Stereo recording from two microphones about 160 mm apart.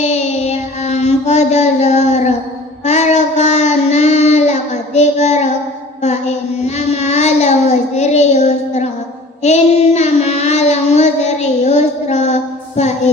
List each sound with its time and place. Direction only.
0.0 s mantra: 45° left (ahead or behind)
2.8 s child singing: 45° left (ahead or behind)